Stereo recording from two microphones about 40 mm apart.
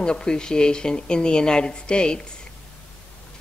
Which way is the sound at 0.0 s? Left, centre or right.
Left.